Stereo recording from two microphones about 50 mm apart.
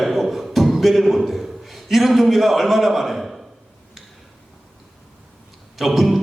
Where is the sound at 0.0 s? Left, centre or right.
Centre.